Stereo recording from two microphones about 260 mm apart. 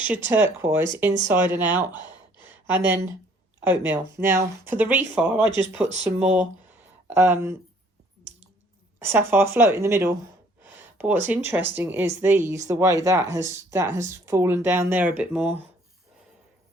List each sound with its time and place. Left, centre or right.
0.0 s speech: centre
2.4 s a sound: centre
3.6 s speech: centre
5.5 s speech: centre
6.1 s speech: centre
9.0 s speech: centre
10.6 s a sound: centre
11.4 s speech: centre